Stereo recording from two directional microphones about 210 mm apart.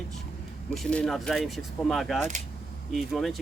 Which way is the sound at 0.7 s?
5° left (ahead or behind).